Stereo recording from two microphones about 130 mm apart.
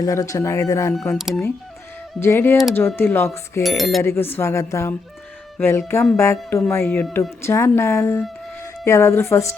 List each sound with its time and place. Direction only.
0.0 s speech: 25° left (ahead or behind)
1.1 s speech: centre (ahead or behind)
2.2 s speech: 20° left (ahead or behind)
3.6 s speech: centre (ahead or behind)
4.0 s speech: 20° left (ahead or behind)